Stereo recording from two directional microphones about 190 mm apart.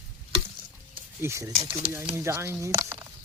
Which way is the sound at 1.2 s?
15° right (ahead or behind).